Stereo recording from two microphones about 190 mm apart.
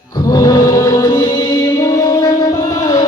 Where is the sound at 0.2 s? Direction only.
20° left (ahead or behind).